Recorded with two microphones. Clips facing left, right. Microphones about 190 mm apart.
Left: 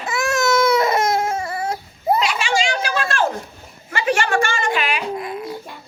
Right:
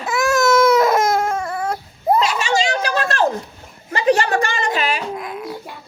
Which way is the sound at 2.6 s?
40° right (ahead or behind).